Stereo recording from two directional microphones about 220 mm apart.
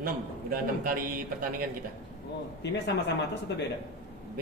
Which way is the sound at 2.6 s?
50° left (ahead or behind).